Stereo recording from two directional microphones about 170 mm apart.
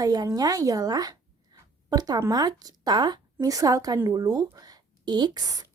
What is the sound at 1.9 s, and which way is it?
Speech, 20° right (ahead or behind).